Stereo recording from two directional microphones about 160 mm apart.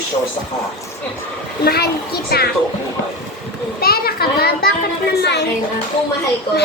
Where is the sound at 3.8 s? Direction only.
70° left (ahead or behind); by 5.4 s 90° left.